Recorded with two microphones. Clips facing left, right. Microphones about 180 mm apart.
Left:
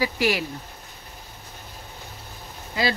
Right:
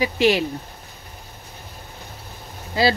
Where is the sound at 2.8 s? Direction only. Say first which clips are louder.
Right 6 dB; 30° right (ahead or behind).